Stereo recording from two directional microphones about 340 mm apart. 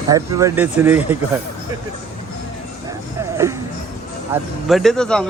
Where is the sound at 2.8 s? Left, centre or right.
Centre.